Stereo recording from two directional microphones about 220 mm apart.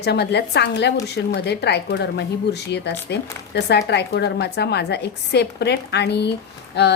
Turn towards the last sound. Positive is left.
turn(degrees=50)  # may be behind; listen again after turning